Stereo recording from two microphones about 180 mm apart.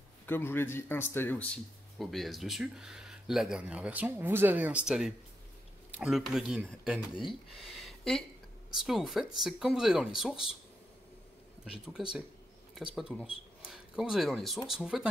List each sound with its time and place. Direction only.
0.3 s speech: 10° left (ahead or behind); by 7.0 s 5° right (ahead or behind)
7.0 s speech: 25° left (ahead or behind)
7.6 s a sound: centre (ahead or behind)
8.8 s speech: centre (ahead or behind)
11.9 s speech: 5° right (ahead or behind)